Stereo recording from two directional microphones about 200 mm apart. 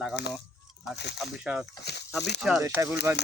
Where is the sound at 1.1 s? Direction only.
5° right (ahead or behind).